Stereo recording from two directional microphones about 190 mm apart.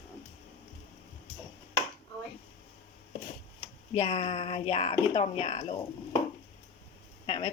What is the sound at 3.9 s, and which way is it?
Speech, 30° left (ahead or behind).